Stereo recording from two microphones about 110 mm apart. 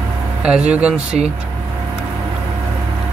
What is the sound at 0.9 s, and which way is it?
Speech, 80° right.